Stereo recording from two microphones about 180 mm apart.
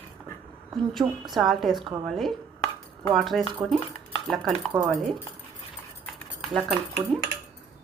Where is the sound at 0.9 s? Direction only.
Centre (ahead or behind).